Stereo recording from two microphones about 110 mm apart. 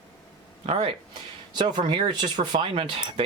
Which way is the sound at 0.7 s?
60° right (ahead or behind).